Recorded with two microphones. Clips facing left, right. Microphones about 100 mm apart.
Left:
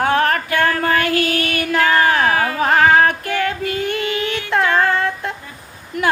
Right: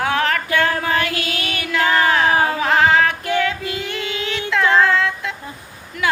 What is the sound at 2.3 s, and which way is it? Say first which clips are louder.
Music: right 1 dB; 25° right (ahead or behind).